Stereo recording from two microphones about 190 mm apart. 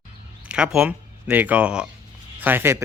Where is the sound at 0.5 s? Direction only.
5° right (ahead or behind).